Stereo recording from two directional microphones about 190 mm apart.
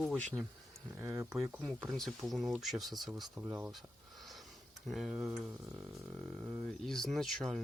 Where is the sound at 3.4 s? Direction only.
10° right (ahead or behind).